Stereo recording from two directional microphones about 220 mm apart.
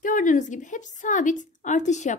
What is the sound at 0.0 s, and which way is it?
Speech, 35° left (ahead or behind).